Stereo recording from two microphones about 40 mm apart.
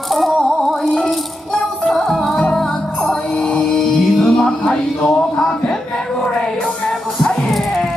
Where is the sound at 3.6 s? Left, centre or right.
Centre.